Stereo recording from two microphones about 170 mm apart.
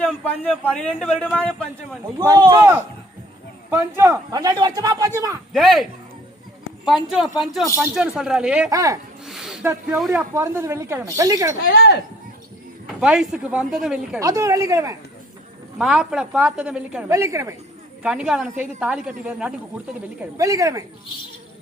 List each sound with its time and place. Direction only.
0.6 s a man's voice: 5° left (ahead or behind)
2.1 s a man's voice: 25° right (ahead or behind)
5.5 s speech: centre (ahead or behind)
8.7 s a man's voice: 20° right (ahead or behind)
9.2 s a sound: 5° right (ahead or behind)
10.1 s a woman's voice: 15° right (ahead or behind)
11.6 s speech: 65° left (ahead or behind)
13.0 s speech: 5° right (ahead or behind)
14.2 s a man's voice: 20° right (ahead or behind)
15.8 s a woman's voice: 5° right (ahead or behind)
18.0 s speech: 5° right (ahead or behind)
20.3 s a man's voice: 20° right (ahead or behind)